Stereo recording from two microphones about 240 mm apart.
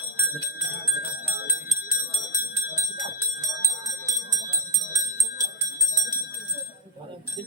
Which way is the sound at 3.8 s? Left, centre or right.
Centre.